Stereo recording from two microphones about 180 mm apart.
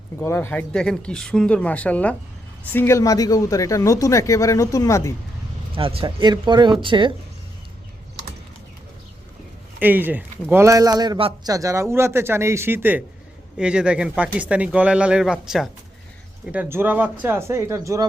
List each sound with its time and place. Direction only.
0.2 s speech: 15° left (ahead or behind)
5.7 s speech: 30° right (ahead or behind)
9.8 s speech: 10° right (ahead or behind)